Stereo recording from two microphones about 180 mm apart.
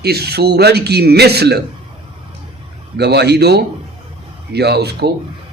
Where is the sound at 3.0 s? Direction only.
65° right (ahead or behind).